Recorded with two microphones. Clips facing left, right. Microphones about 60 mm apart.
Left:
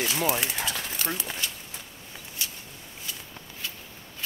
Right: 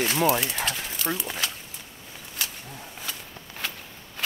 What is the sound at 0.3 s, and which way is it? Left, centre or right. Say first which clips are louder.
Speech: right 3 dB; centre.